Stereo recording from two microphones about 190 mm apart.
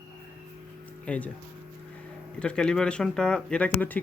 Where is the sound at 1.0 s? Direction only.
5° left (ahead or behind).